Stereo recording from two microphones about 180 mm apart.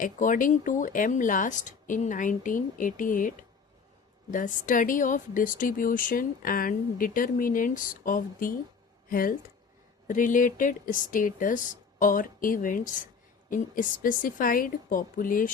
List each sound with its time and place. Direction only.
0.0 s a woman's voice: 50° left (ahead or behind)